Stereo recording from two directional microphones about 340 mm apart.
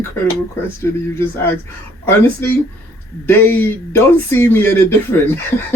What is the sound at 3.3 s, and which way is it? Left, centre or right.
Speech, centre.